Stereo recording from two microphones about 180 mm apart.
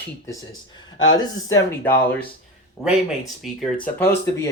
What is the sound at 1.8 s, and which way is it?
Speech, 10° left (ahead or behind).